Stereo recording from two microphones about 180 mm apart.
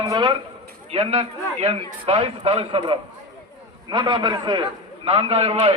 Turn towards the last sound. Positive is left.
turn(degrees=-35)  # may be behind; listen again after turning